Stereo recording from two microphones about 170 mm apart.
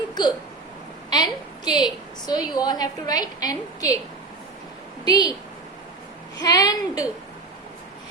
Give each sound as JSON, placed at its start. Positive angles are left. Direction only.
{"t": 0.1, "sound": "hiccup", "side_deg": 25}
{"t": 1.1, "sound": "a woman's voice", "side_deg": 25}
{"t": 5.0, "sound": "a woman's voice", "side_deg": 25}
{"t": 6.4, "sound": "a woman's voice", "side_deg": 20}